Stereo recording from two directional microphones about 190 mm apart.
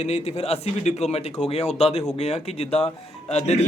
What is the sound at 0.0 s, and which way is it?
Speech, 35° left (ahead or behind).